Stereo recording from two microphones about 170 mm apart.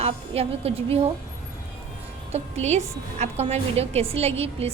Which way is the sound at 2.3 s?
40° right (ahead or behind).